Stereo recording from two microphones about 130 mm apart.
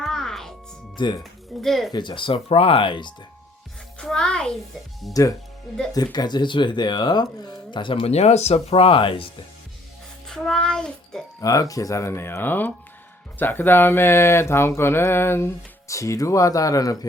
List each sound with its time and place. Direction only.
0.0 s music: 5° left (ahead or behind)
0.9 s speech: 35° left (ahead or behind)
1.2 s speech: centre (ahead or behind)
1.9 s speech: 35° left (ahead or behind)
3.9 s a child's voice: 5° left (ahead or behind)
5.9 s speech: 30° left (ahead or behind)
8.1 s speech: 55° left (ahead or behind)
10.2 s music: 5° left (ahead or behind)
11.3 s speech: 25° left (ahead or behind)